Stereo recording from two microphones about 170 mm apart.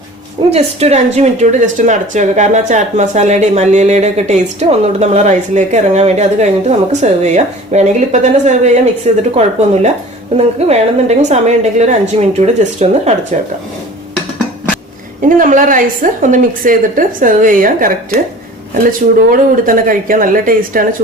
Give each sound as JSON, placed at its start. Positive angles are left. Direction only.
{"t": 0.5, "sound": "a woman's voice", "side_deg": -40}
{"t": 10.3, "sound": "a woman's voice", "side_deg": -40}
{"t": 15.2, "sound": "speech", "side_deg": -50}